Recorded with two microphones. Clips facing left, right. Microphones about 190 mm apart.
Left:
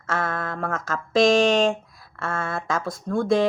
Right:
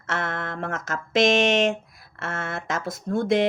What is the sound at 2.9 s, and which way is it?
Speech, 25° right (ahead or behind).